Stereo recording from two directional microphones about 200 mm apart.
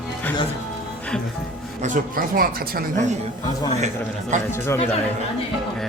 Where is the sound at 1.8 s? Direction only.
40° right (ahead or behind).